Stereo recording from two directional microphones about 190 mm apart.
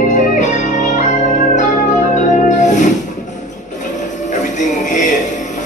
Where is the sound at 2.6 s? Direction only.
40° left (ahead or behind).